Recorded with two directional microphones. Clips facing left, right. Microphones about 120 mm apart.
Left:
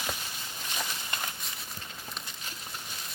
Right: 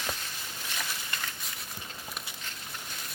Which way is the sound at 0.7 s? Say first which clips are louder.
Left 2 dB; 20° left (ahead or behind).